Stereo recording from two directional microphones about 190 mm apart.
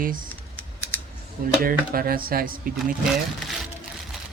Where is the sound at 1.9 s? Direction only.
50° right (ahead or behind).